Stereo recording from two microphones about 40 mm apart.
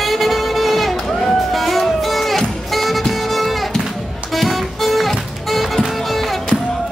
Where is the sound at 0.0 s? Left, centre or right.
Centre.